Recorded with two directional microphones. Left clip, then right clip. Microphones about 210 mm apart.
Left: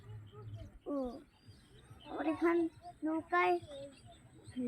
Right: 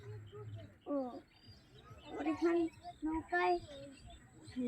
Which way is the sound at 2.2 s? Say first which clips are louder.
Left 2 dB; 20° left (ahead or behind).